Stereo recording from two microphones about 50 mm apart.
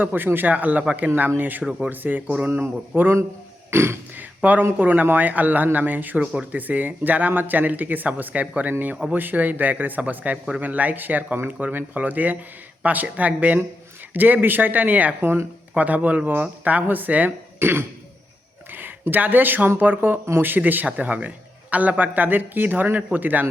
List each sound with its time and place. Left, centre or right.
0.0 s speech: right
2.5 s speech: right
3.7 s speech: right
4.4 s speech: right
15.2 s speech: right
15.7 s speech: right
17.6 s throat clearing: right
18.7 s speech: right
20.8 s speech: right